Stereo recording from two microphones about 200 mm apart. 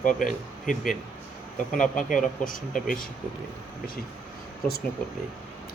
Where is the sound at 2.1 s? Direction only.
40° left (ahead or behind).